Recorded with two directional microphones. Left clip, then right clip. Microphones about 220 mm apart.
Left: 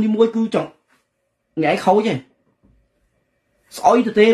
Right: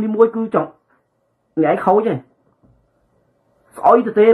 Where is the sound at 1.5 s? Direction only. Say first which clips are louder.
Right 2 dB; 50° left (ahead or behind).